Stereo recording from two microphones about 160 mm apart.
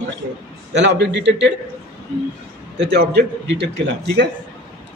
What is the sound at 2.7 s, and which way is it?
A man's voice, 90° right.